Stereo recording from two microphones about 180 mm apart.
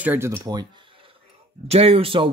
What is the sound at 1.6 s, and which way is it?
Speech, 35° right (ahead or behind).